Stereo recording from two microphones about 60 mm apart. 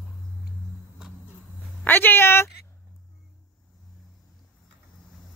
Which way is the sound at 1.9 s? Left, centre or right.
Left.